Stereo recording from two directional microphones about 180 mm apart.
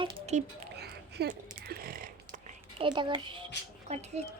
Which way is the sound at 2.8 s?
25° right (ahead or behind).